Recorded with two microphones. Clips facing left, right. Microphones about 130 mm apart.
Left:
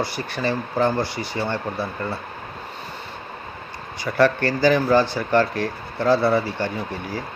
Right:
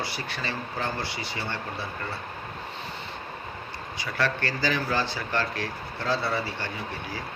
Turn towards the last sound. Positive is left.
turn(degrees=45)  # may be behind; listen again after turning